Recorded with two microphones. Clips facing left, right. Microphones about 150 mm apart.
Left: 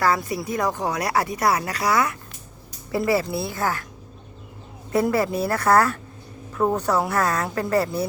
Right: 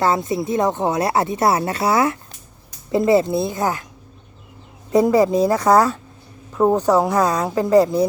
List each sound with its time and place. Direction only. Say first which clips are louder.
0.0 s speech: right 4 dB; 25° right (ahead or behind)
4.9 s speech: right 6 dB; 15° right (ahead or behind)